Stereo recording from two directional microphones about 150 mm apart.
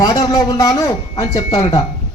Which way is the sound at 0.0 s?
25° left (ahead or behind).